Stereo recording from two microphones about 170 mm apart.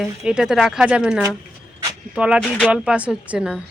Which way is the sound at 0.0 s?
5° right (ahead or behind).